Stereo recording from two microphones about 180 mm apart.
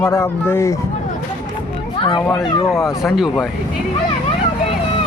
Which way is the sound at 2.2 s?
5° left (ahead or behind).